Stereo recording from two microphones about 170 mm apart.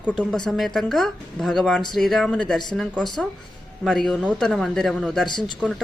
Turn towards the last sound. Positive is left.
turn(degrees=0)  # may be behind; listen again after turning